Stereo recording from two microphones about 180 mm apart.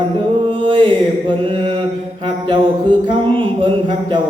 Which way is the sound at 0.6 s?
25° right (ahead or behind).